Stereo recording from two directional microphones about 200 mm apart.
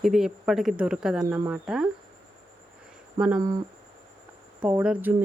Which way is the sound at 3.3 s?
20° right (ahead or behind).